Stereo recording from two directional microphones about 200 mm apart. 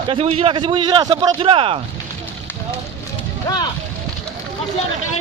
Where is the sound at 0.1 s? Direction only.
30° right (ahead or behind).